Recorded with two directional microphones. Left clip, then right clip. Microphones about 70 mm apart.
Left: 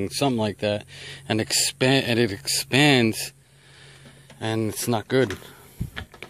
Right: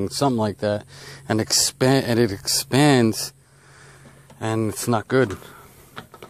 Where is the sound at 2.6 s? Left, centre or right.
Right.